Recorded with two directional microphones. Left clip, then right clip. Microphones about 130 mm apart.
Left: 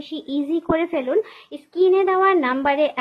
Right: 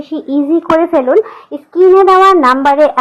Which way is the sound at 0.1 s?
35° left (ahead or behind).